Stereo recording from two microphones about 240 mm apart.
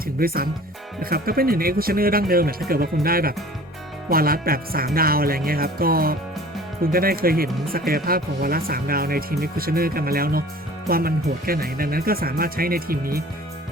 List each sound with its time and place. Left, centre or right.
0.2 s speech: right